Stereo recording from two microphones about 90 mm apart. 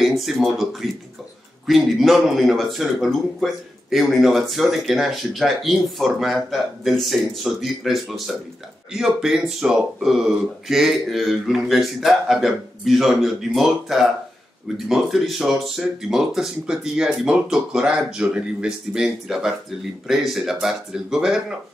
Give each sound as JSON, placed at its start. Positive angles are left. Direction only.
{"t": 0.0, "sound": "speech", "side_deg": 0}